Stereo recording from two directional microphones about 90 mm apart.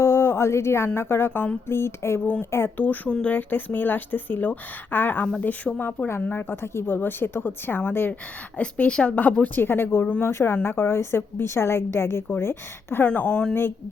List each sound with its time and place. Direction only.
0.0 s a sound: 30° left (ahead or behind)
0.9 s speech: 25° left (ahead or behind)
6.1 s speech: 25° left (ahead or behind)
8.5 s speech: 10° left (ahead or behind)
13.1 s speech: 10° left (ahead or behind)
13.5 s speech: 25° left (ahead or behind)